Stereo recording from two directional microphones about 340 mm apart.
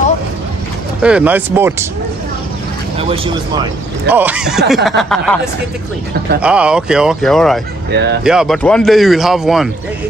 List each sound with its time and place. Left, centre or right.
1.0 s speech: centre
3.0 s speech: centre
4.1 s speech: centre
6.4 s speech: centre
7.9 s speech: right
8.2 s speech: centre